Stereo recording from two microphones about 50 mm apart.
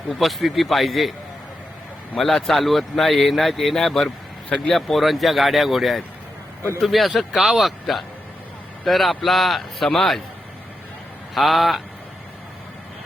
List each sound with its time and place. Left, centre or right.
0.1 s speech: centre
2.1 s speech: centre
6.6 s speech: left
6.8 s speech: centre
11.3 s speech: centre